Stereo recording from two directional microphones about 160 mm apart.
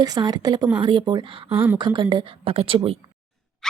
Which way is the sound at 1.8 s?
30° right (ahead or behind).